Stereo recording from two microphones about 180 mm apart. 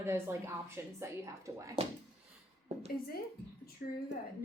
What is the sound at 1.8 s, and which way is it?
Speech, 30° right (ahead or behind).